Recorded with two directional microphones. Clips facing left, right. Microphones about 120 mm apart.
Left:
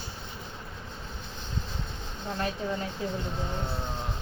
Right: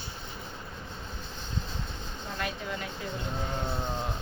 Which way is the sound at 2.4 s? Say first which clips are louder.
Left 4 dB; 35° left (ahead or behind).